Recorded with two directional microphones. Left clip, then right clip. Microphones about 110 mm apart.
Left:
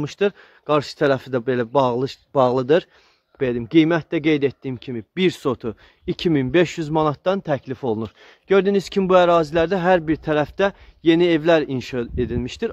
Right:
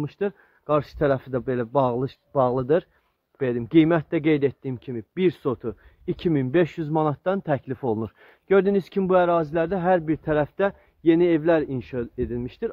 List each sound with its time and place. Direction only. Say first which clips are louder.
0.0 s speech: left 6 dB; 45° left (ahead or behind)
0.7 s speech: left 3 dB; 20° left (ahead or behind)
3.3 s speech: left 2 dB; 15° left (ahead or behind); by 5.8 s 35° left (ahead or behind)
6.0 s speech: left 4 dB; 25° left (ahead or behind)
7.5 s speech: left 2 dB; 10° left (ahead or behind)
9.0 s speech: left 5 dB; 30° left (ahead or behind)